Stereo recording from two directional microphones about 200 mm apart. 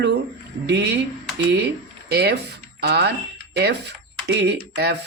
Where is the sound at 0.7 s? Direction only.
55° right (ahead or behind).